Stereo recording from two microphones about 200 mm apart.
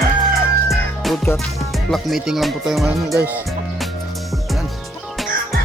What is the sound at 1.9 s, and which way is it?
Speech, centre (ahead or behind).